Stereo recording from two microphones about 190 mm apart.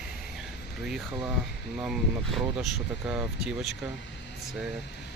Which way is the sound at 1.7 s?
Centre (ahead or behind).